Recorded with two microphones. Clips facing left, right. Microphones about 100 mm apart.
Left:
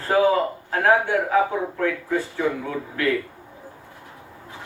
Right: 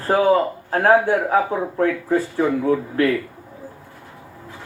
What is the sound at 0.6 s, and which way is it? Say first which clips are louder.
Speech: right 4 dB; 35° right (ahead or behind).